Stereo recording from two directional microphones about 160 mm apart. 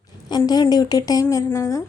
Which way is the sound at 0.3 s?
25° left (ahead or behind).